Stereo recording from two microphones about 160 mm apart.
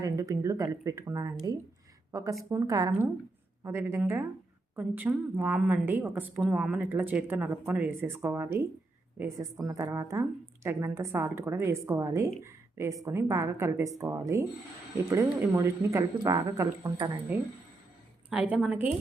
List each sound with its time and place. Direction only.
0.0 s a woman's voice: 20° right (ahead or behind)
18.3 s a woman's voice: 10° right (ahead or behind)